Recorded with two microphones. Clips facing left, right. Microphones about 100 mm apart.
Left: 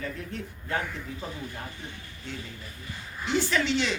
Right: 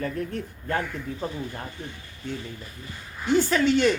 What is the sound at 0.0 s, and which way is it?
Speech, 45° right (ahead or behind).